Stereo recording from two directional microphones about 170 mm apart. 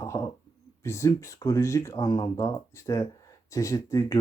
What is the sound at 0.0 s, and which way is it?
Speech, 15° left (ahead or behind).